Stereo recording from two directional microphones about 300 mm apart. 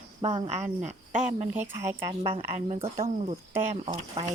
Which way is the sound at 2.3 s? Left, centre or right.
Right.